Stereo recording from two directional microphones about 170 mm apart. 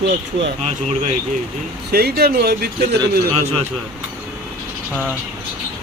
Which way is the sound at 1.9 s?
70° right (ahead or behind).